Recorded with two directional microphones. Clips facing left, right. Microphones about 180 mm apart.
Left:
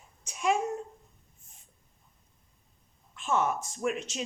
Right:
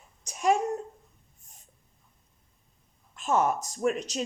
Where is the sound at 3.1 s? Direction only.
40° right (ahead or behind).